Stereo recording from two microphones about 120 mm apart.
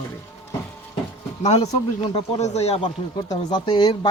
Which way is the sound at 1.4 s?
65° left (ahead or behind).